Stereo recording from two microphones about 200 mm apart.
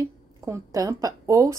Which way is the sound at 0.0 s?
15° right (ahead or behind).